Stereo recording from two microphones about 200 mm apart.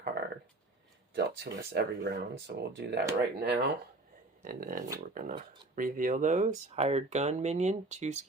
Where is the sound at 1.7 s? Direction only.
55° right (ahead or behind).